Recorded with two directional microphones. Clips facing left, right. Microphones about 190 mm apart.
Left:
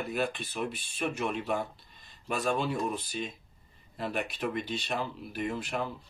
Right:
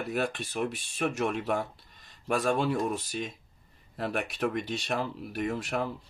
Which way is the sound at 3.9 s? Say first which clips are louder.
Right 2 dB; 55° right (ahead or behind).